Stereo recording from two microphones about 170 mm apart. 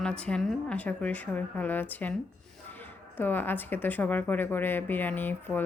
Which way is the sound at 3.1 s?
10° left (ahead or behind).